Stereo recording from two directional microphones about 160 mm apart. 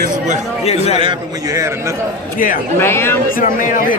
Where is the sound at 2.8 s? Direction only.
15° left (ahead or behind).